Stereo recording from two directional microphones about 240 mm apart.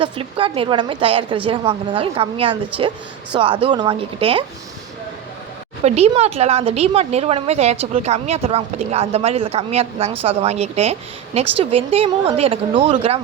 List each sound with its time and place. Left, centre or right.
0.0 s a woman's voice: right
5.8 s a woman's voice: right